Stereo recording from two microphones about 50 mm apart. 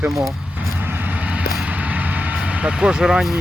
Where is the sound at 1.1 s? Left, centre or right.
Right.